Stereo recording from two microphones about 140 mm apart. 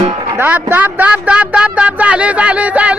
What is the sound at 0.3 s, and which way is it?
Speech, 10° right (ahead or behind).